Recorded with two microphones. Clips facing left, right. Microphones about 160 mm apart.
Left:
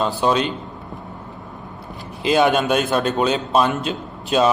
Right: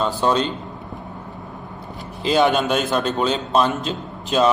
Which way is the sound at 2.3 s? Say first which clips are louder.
Left 1 dB; 15° left (ahead or behind).